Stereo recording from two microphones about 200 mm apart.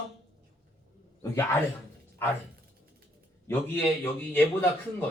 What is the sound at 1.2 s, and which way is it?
Speech, 10° left (ahead or behind).